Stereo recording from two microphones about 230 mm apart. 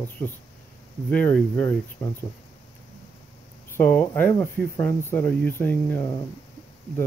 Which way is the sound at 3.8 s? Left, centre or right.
Centre.